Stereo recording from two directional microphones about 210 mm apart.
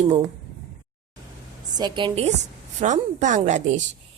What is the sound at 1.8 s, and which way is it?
A woman's voice, 20° right (ahead or behind).